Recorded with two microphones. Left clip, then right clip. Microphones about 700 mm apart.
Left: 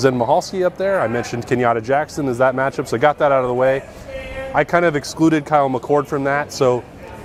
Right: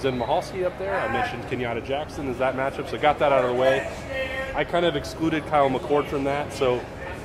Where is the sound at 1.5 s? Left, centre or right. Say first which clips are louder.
Left 11 dB; left.